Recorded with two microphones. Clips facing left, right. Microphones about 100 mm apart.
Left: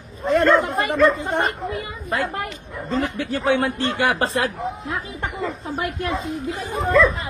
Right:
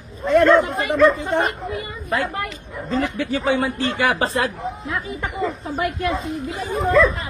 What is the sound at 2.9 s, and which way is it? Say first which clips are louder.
Speech: right 1 dB; centre (ahead or behind).